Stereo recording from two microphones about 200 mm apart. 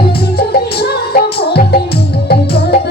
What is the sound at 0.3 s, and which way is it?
Music, 50° left (ahead or behind).